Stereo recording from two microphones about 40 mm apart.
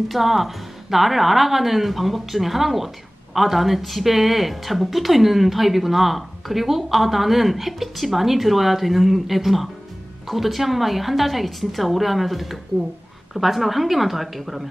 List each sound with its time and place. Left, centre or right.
0.1 s a woman's voice: centre